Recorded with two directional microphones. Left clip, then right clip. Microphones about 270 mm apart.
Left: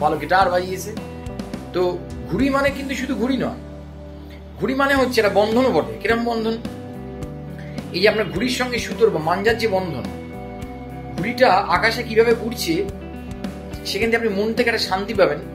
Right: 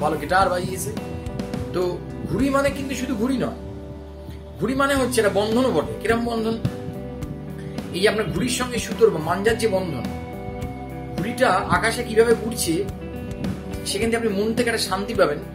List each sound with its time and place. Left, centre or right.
0.0 s speech: centre
2.3 s speech: centre
4.6 s speech: centre
7.9 s speech: centre
11.1 s speech: centre